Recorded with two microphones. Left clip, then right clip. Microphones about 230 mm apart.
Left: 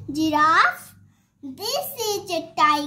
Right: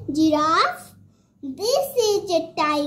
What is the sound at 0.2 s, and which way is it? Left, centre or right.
A child's voice, left.